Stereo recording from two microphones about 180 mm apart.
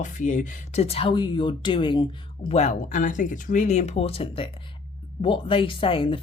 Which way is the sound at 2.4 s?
35° left (ahead or behind).